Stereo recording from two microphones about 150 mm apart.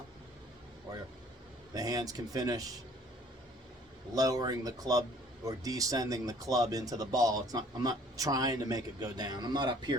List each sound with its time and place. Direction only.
1.7 s speech: 25° right (ahead or behind)
4.1 s speech: 25° right (ahead or behind)